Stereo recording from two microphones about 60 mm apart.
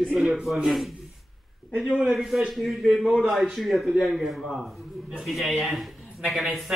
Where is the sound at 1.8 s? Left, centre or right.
Centre.